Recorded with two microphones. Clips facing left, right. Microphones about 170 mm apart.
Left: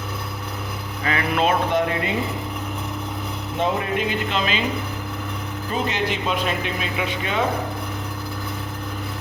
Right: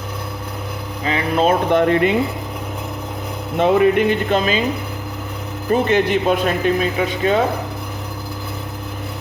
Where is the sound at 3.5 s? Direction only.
65° right (ahead or behind).